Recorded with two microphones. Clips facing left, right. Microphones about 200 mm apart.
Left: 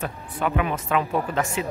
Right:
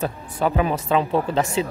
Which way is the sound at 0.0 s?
35° right (ahead or behind).